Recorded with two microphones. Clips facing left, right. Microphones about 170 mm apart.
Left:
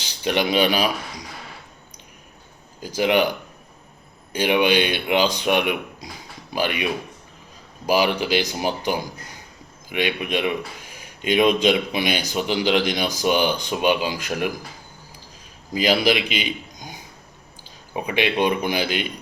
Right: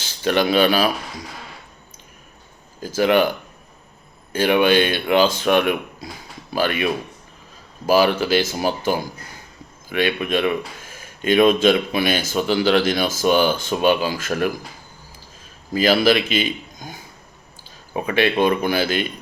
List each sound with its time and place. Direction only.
0.0 s speech: 15° left (ahead or behind)
2.8 s speech: 15° left (ahead or behind)
4.3 s speech: 15° left (ahead or behind)
7.9 s speech: 15° left (ahead or behind)
15.7 s a man's voice: 15° left (ahead or behind)